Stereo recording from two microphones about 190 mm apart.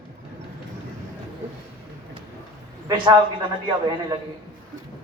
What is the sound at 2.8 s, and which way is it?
Speech, 25° right (ahead or behind).